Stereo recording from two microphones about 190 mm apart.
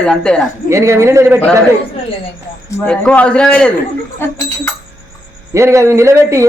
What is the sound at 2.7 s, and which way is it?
Speech, 5° left (ahead or behind).